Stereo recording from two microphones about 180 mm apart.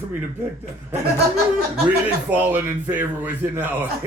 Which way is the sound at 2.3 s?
10° right (ahead or behind).